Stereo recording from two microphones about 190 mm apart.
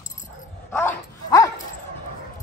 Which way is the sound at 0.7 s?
10° left (ahead or behind).